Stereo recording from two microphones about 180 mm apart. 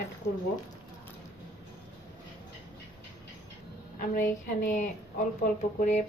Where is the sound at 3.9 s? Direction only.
50° left (ahead or behind).